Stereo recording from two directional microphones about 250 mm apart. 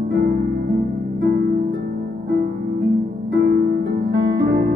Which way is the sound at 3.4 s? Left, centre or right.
Right.